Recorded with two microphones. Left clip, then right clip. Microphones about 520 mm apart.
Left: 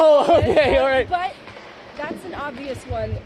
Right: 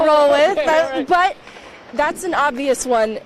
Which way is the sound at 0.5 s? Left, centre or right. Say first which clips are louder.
Left 1 dB; left.